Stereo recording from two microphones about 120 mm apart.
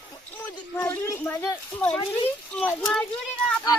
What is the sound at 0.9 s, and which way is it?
Speech, 20° left (ahead or behind).